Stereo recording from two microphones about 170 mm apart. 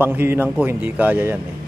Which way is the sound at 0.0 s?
10° right (ahead or behind).